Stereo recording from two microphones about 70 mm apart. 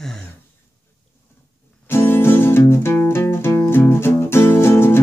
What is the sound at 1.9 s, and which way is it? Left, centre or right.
Music, left.